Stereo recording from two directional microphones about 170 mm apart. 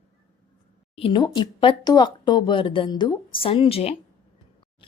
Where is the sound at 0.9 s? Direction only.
30° left (ahead or behind).